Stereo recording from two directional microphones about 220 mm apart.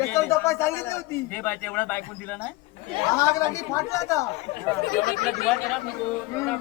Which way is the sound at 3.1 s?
15° left (ahead or behind).